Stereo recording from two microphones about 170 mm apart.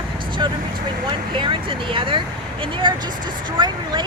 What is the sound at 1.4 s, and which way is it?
Speech, 30° right (ahead or behind).